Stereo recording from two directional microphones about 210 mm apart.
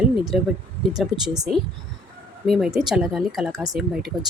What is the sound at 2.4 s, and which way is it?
Speech, centre (ahead or behind).